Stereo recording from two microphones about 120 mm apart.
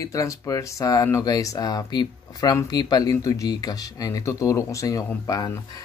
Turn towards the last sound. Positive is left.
turn(degrees=30)  # may be behind; listen again after turning